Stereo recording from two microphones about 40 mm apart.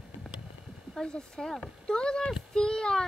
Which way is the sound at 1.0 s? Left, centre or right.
Centre.